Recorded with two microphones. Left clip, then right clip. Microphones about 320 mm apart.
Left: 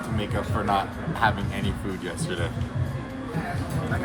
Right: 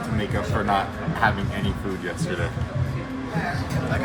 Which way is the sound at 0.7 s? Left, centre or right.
Centre.